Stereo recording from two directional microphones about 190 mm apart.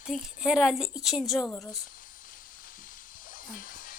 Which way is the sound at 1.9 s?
45° left (ahead or behind).